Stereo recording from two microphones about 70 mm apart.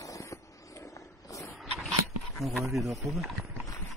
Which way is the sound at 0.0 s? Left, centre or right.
Left.